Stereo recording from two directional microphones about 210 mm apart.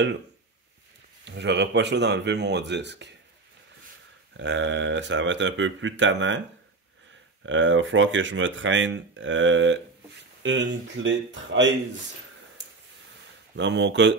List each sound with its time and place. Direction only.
1.2 s speech: 55° right (ahead or behind)
4.4 s speech: 60° right (ahead or behind)
7.4 s speech: 65° right (ahead or behind)
13.6 s speech: 60° right (ahead or behind)